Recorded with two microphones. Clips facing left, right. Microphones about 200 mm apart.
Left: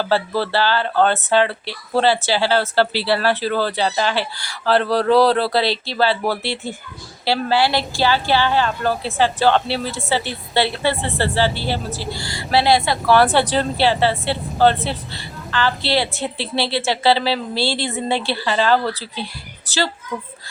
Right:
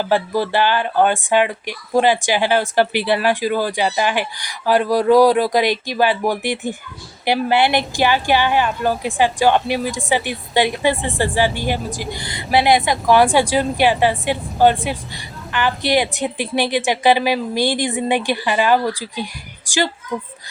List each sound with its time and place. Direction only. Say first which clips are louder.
0.0 s a woman's voice: right 1 dB; 15° right (ahead or behind)